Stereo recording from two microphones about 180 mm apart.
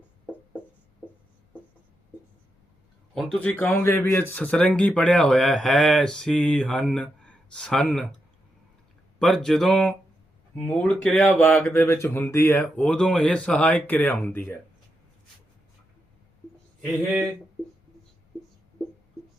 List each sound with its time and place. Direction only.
1.0 s music: 5° right (ahead or behind)
3.3 s speech: 10° left (ahead or behind)
9.1 s speech: centre (ahead or behind)